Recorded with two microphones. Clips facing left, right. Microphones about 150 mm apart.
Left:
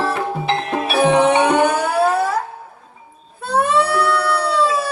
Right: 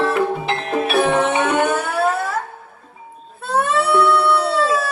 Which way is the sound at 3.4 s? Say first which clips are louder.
Left 2 dB; centre (ahead or behind).